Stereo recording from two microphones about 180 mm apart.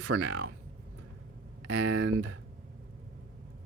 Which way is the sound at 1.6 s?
85° right.